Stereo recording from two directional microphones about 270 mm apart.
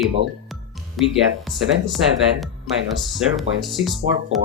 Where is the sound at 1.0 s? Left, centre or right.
Centre.